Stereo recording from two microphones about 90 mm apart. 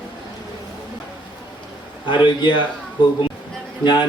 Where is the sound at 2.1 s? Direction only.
60° left (ahead or behind).